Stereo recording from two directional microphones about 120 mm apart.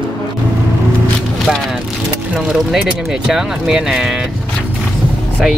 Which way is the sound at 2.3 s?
5° right (ahead or behind).